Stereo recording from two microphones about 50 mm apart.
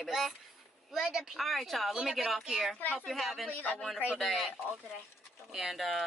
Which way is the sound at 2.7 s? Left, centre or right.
Left.